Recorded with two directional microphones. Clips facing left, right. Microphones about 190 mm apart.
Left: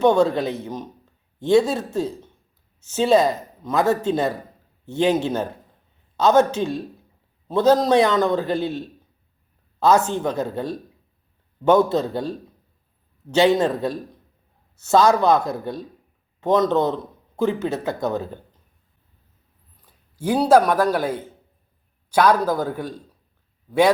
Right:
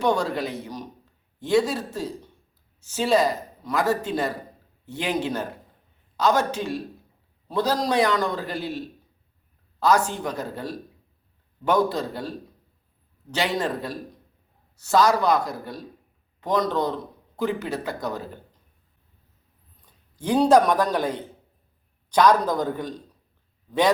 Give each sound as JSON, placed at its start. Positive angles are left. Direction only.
{"t": 0.0, "sound": "speech", "side_deg": 25}
{"t": 9.8, "sound": "speech", "side_deg": 25}
{"t": 13.3, "sound": "speech", "side_deg": 25}
{"t": 19.8, "sound": "a man's voice", "side_deg": 5}